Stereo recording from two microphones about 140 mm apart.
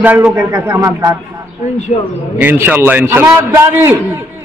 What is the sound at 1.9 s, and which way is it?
Speech, 55° left (ahead or behind).